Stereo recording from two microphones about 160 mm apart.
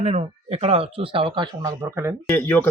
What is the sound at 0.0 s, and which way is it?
Speech, 40° right (ahead or behind).